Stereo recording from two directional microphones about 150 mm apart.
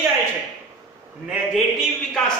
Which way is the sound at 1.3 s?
Centre (ahead or behind).